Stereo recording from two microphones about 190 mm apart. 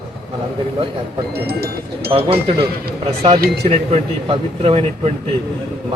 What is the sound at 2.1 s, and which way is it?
A man's voice, 30° right (ahead or behind).